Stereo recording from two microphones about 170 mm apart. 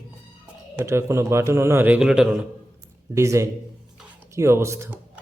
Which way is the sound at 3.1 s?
15° right (ahead or behind).